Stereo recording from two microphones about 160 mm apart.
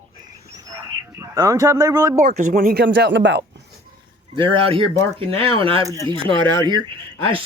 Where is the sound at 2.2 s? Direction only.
50° right (ahead or behind); by 3.5 s 90° right.